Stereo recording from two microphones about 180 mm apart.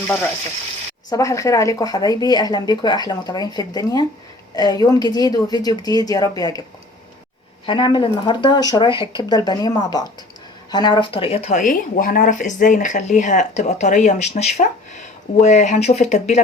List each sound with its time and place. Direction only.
1.1 s speech: 20° left (ahead or behind)
7.7 s speech: 25° left (ahead or behind)